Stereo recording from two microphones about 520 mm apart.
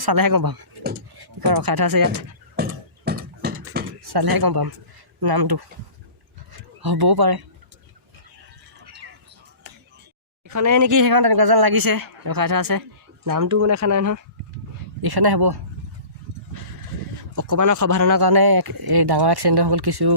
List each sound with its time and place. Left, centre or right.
0.0 s speech: right
0.8 s speech: centre
1.2 s speech: right
2.6 s a sound: centre
4.0 s speech: right
6.8 s speech: right
10.5 s speech: right
15.0 s speech: right
17.3 s speech: right